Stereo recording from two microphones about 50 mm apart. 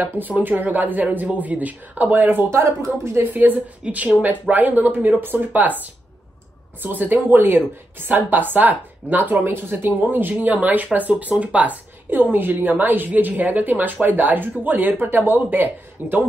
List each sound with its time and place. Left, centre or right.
0.4 s speech: right
2.5 s speech: right
3.3 s speech: right
3.8 s speech: right